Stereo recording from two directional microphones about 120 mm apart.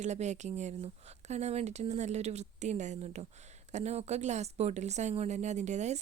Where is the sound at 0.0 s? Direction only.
75° right (ahead or behind).